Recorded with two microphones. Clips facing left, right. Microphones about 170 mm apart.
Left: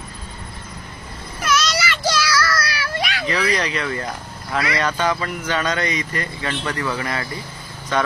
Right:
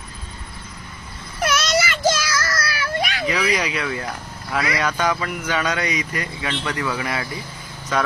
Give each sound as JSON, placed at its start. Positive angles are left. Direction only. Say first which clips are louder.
{"t": 1.4, "sound": "child singing", "louder": "right 1 dB", "side_deg": -55}
{"t": 3.3, "sound": "speech", "louder": "left 1 dB", "side_deg": -10}